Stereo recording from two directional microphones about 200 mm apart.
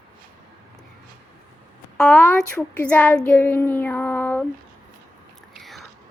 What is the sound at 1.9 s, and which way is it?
A child's voice, 5° left (ahead or behind).